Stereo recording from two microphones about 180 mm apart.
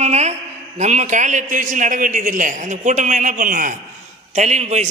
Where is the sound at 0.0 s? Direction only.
40° right (ahead or behind).